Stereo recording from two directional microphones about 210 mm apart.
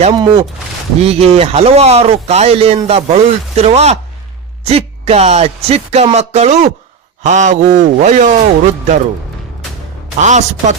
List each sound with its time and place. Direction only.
0.1 s speech: 20° right (ahead or behind)
10.2 s speech: 35° right (ahead or behind)